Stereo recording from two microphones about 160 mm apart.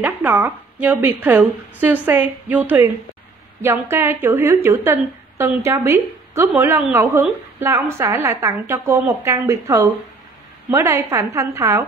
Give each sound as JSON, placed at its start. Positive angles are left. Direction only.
{"t": 0.0, "sound": "a woman's voice", "side_deg": -10}